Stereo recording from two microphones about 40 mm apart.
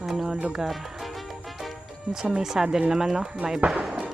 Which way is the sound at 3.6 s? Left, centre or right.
Right.